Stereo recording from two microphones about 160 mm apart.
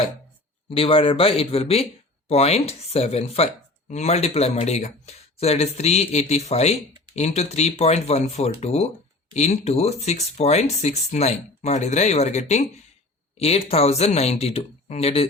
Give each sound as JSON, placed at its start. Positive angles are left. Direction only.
{"t": 0.7, "sound": "speech", "side_deg": 35}